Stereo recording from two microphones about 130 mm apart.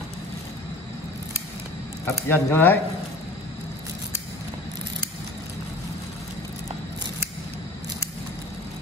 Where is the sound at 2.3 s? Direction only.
15° left (ahead or behind).